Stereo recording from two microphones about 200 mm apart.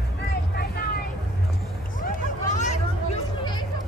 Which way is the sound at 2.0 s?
35° left (ahead or behind).